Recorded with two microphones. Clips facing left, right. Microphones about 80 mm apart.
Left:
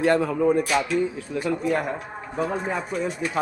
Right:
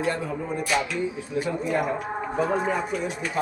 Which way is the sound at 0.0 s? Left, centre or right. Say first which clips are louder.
Left 7 dB; left.